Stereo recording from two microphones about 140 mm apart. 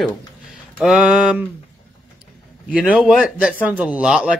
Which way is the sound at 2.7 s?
10° right (ahead or behind).